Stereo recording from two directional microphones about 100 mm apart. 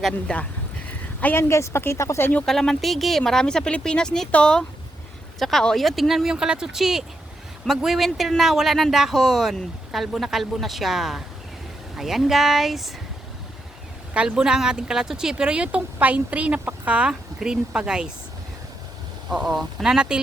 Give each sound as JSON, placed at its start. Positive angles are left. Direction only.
{"t": 0.0, "sound": "speech", "side_deg": 10}
{"t": 0.9, "sound": "speech", "side_deg": 20}
{"t": 2.5, "sound": "speech", "side_deg": 5}
{"t": 14.1, "sound": "speech", "side_deg": -10}
{"t": 19.3, "sound": "speech", "side_deg": -5}